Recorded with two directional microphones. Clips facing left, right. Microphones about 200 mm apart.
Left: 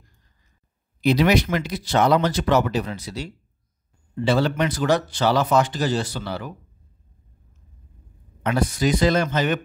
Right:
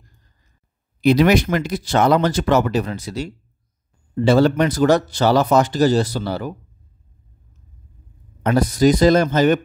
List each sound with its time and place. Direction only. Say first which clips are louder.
1.0 s speech: right 4 dB; 50° right (ahead or behind)
8.4 s speech: right 6 dB; 40° right (ahead or behind)